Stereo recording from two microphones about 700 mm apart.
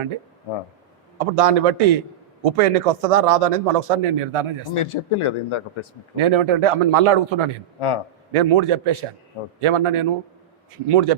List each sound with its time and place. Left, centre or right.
1.2 s speech: right
4.7 s speech: left
6.1 s speech: right